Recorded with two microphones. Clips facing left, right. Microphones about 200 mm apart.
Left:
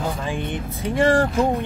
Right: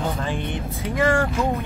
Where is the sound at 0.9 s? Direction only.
30° left (ahead or behind).